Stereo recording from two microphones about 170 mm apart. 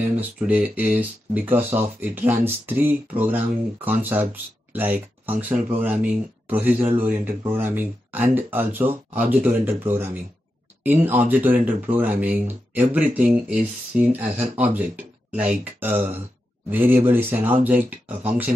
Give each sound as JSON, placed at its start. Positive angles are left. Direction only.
{"t": 0.0, "sound": "speech", "side_deg": -10}